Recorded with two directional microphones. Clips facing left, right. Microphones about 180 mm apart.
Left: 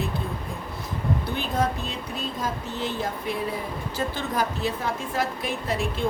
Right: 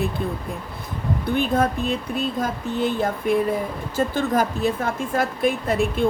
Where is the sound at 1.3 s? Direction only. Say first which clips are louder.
Right 9 dB; 55° right (ahead or behind).